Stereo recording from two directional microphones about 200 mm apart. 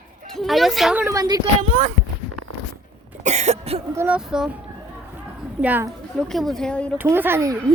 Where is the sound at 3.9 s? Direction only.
5° right (ahead or behind).